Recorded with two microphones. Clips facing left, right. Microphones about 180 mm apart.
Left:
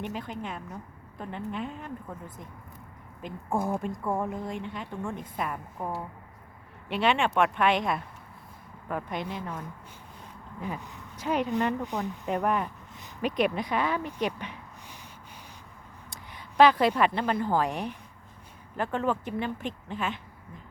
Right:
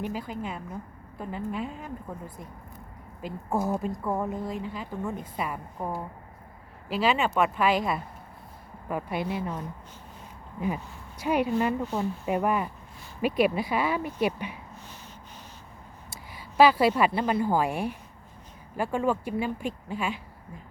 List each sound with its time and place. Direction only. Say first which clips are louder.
0.1 s a woman's voice: right 2 dB; 5° right (ahead or behind)
10.8 s speech: right 1 dB; 15° left (ahead or behind)
11.2 s a woman's voice: right 3 dB; 10° right (ahead or behind)
11.8 s speech: right 3 dB; 15° left (ahead or behind)
12.2 s a woman's voice: even; 5° right (ahead or behind)
16.3 s a woman's voice: even; 5° right (ahead or behind)